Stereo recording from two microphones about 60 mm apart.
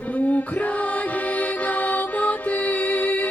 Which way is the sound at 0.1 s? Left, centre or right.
Left.